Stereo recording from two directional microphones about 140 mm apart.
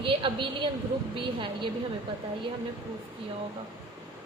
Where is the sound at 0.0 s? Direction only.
35° right (ahead or behind).